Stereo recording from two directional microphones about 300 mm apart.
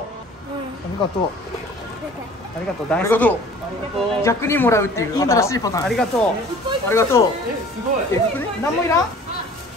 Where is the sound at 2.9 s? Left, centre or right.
Centre.